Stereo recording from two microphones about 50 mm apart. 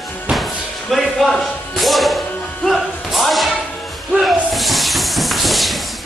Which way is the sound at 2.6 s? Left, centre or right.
Centre.